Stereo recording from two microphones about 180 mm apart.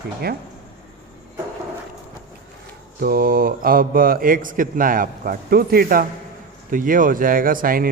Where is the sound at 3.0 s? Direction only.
55° right (ahead or behind).